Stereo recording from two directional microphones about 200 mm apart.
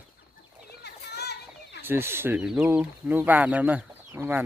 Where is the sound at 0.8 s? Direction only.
55° left (ahead or behind).